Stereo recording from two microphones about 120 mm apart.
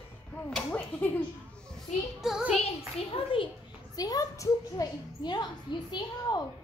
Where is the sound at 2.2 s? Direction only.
5° right (ahead or behind).